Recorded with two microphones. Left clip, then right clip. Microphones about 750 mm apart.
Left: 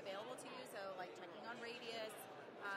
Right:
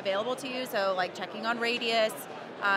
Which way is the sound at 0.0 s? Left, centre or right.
Right.